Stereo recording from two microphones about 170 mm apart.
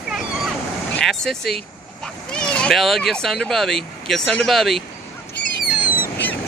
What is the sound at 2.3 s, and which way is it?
Speech, 5° left (ahead or behind).